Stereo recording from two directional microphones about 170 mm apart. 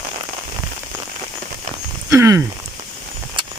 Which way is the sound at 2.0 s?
15° right (ahead or behind).